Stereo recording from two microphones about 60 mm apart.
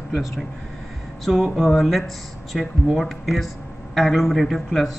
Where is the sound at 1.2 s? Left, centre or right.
Centre.